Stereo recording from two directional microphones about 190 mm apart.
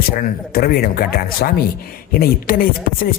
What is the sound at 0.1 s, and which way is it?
Speech, 50° left (ahead or behind).